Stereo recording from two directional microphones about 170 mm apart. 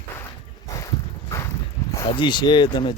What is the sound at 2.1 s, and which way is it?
Speech, 25° left (ahead or behind).